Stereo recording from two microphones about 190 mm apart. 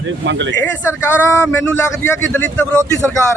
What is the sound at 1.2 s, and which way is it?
A man's voice, 10° left (ahead or behind).